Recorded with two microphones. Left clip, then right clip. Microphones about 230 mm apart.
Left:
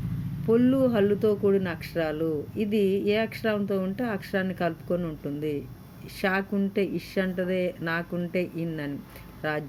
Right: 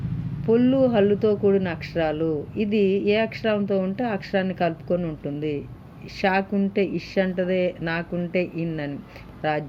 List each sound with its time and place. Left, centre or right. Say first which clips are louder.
0.4 s speech: right 3 dB; centre